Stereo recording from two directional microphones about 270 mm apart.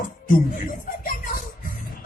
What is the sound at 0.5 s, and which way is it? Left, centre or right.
Music, left.